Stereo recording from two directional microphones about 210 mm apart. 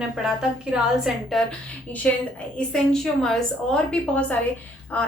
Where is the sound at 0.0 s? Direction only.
5° right (ahead or behind).